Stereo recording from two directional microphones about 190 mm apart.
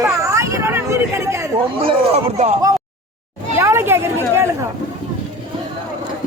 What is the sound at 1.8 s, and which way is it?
Speech, 35° right (ahead or behind).